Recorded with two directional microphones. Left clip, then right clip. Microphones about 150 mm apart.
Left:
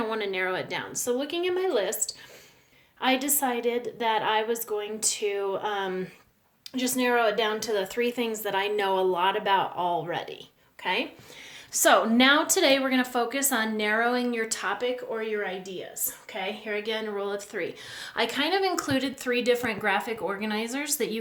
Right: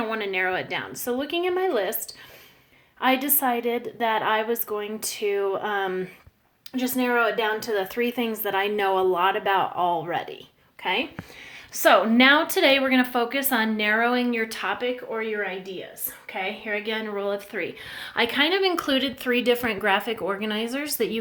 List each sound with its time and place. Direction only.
0.0 s speech: centre (ahead or behind)
0.5 s a woman's voice: 20° right (ahead or behind)
0.9 s speech: 35° right (ahead or behind)
11.7 s a woman's voice: 15° right (ahead or behind); by 21.2 s 45° right (ahead or behind)